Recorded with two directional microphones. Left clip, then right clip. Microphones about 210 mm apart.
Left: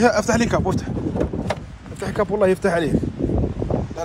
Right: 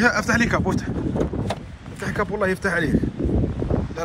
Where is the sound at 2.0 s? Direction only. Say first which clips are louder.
Left 4 dB; 25° left (ahead or behind).